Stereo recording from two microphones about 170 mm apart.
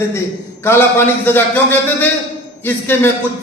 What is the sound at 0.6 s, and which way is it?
A man's voice, 15° left (ahead or behind).